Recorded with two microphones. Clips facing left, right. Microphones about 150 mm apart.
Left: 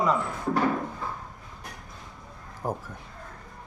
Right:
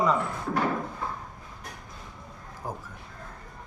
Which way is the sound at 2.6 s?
60° left (ahead or behind).